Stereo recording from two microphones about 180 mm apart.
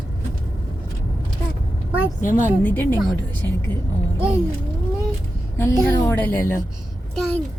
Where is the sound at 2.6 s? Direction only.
10° left (ahead or behind).